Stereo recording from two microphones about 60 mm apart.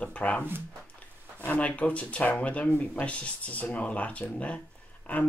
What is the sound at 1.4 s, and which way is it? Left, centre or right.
Speech, left.